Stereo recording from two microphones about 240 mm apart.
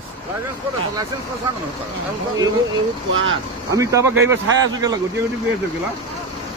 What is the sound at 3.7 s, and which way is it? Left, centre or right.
Speech, centre.